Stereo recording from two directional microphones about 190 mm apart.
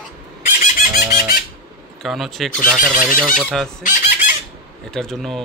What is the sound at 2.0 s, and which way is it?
Speech, centre (ahead or behind).